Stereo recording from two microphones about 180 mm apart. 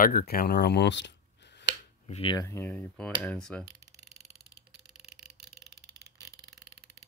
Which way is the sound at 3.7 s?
75° right (ahead or behind).